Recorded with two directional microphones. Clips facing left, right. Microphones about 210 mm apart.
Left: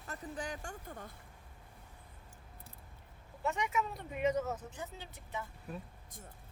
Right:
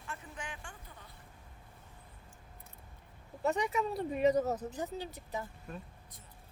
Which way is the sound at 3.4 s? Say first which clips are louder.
Right 4 dB; 35° right (ahead or behind).